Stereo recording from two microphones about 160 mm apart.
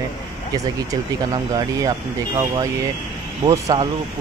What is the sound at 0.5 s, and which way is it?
Speech, 20° right (ahead or behind).